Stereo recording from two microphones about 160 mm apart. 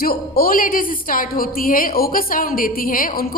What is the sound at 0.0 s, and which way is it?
A woman's voice, 70° left (ahead or behind).